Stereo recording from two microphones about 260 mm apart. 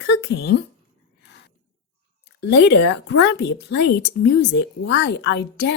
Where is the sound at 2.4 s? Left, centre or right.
Left.